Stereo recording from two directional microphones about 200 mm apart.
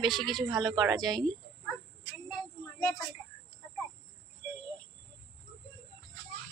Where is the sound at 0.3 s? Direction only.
Centre (ahead or behind).